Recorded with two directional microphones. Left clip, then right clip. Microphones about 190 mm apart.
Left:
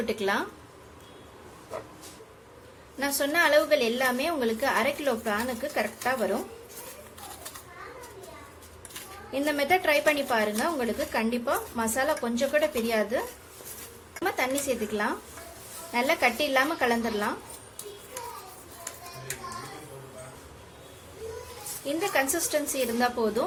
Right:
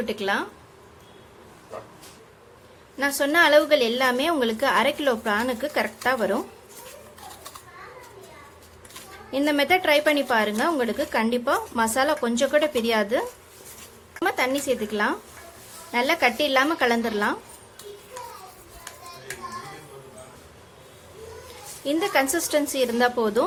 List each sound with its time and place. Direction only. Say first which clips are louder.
0.0 s speech: right 2 dB; 10° right (ahead or behind)
3.0 s a woman's voice: right 5 dB; 15° right (ahead or behind)
9.3 s a woman's voice: right 4 dB; 20° right (ahead or behind)
14.3 s a woman's voice: right 4 dB; 15° right (ahead or behind)
21.8 s a woman's voice: right 5 dB; 20° right (ahead or behind)